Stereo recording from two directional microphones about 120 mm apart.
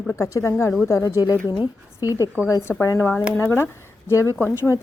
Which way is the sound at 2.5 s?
20° left (ahead or behind).